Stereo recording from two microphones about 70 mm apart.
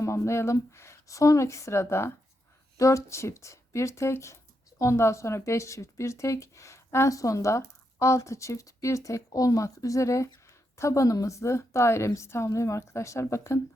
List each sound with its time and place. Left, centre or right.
0.0 s a woman's voice: left